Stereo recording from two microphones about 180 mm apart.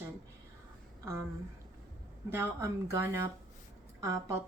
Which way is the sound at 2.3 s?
15° right (ahead or behind).